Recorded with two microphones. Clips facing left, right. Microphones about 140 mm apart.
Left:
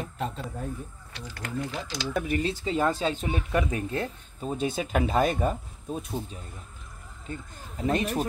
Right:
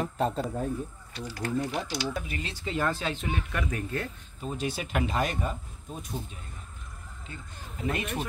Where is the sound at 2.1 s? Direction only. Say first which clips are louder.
Left 8 dB; 50° left (ahead or behind).